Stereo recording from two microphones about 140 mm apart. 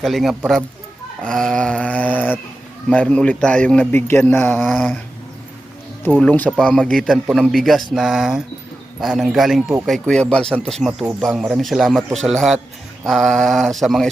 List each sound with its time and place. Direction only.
0.0 s speech: centre (ahead or behind)
1.2 s a sound: 5° left (ahead or behind)
2.9 s a man's voice: 5° left (ahead or behind)
3.9 s a man's voice: 15° left (ahead or behind)
6.1 s speech: 10° left (ahead or behind)